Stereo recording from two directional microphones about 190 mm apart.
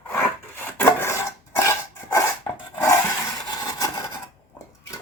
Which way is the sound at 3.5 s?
20° left (ahead or behind).